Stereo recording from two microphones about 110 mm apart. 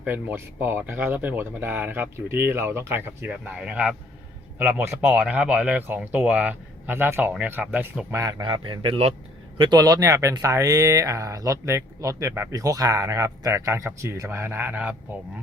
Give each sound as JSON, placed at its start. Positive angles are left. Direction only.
{"t": 0.0, "sound": "speech", "side_deg": -15}
{"t": 4.5, "sound": "speech", "side_deg": -20}
{"t": 8.1, "sound": "speech", "side_deg": -35}
{"t": 8.4, "sound": "a man's voice", "side_deg": -50}